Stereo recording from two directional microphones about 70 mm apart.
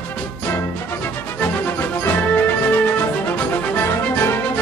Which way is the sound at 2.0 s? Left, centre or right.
Left.